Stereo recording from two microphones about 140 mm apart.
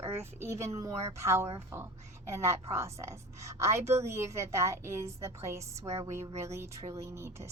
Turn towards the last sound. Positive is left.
turn(degrees=-20)  # may be behind; listen again after turning